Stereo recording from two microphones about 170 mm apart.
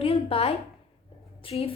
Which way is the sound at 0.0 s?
35° left (ahead or behind).